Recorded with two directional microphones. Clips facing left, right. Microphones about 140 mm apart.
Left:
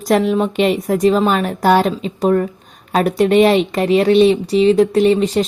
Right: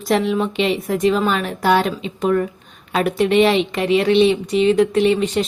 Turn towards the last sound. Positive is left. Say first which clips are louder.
# left 3 dB
turn(degrees=35)  # may be behind; listen again after turning